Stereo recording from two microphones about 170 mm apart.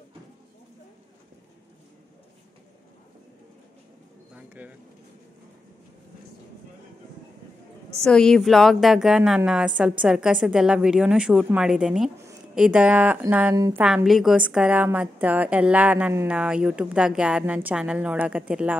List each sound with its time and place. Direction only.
4.6 s a woman's voice: 10° right (ahead or behind)
7.9 s a woman's voice: 5° left (ahead or behind)
13.6 s a woman's voice: 20° right (ahead or behind)
13.8 s a woman's voice: 5° right (ahead or behind)